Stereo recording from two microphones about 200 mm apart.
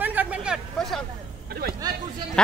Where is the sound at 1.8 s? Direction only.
20° right (ahead or behind).